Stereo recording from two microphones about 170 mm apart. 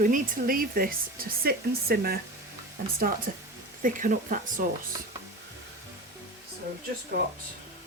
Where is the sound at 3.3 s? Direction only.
55° right (ahead or behind).